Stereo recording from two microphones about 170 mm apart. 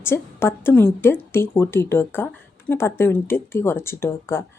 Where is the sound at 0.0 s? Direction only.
15° left (ahead or behind).